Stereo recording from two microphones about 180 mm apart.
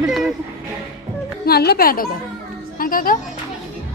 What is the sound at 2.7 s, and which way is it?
Music, 50° left (ahead or behind).